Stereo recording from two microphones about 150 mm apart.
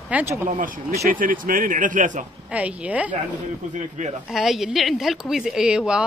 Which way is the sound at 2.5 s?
10° right (ahead or behind).